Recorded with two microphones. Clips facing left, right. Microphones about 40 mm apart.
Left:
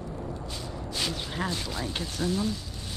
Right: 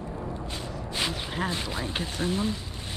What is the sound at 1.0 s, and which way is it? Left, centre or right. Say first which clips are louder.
Speech: right 2 dB; right.